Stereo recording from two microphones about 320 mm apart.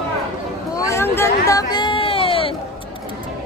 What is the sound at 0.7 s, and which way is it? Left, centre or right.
Speech, centre.